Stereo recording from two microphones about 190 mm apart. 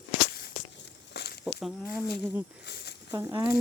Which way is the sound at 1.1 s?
60° left (ahead or behind).